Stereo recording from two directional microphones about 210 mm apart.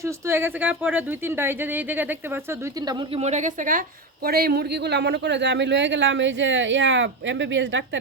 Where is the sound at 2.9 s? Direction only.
25° right (ahead or behind); by 8.0 s 60° right (ahead or behind).